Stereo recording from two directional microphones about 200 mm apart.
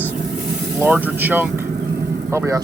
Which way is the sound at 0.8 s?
10° right (ahead or behind).